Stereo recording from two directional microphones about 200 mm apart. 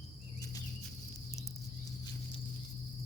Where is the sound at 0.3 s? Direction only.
15° left (ahead or behind).